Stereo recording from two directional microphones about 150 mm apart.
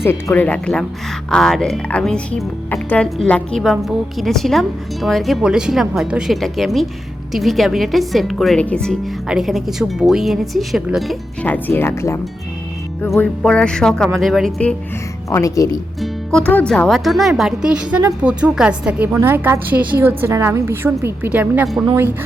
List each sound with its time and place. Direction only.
0.0 s speech: 15° left (ahead or behind); by 11.2 s centre (ahead or behind)
11.4 s speech: 15° left (ahead or behind)
13.1 s speech: 5° left (ahead or behind)
15.3 s speech: 20° left (ahead or behind)
16.0 s a woman's voice: 5° left (ahead or behind); by 21.7 s 10° right (ahead or behind)